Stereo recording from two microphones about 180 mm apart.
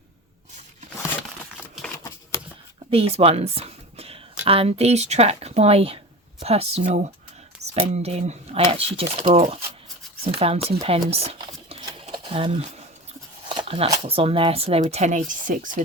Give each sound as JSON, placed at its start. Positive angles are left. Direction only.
{"t": 1.5, "sound": "typewriter", "side_deg": 0}
{"t": 2.9, "sound": "speech", "side_deg": -35}
{"t": 11.7, "sound": "a sound", "side_deg": -25}
{"t": 13.9, "sound": "speech", "side_deg": -30}